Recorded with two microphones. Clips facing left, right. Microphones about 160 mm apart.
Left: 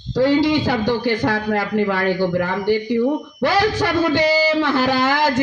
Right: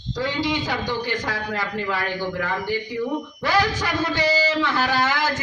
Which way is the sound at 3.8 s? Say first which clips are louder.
Left 7 dB; 65° left (ahead or behind).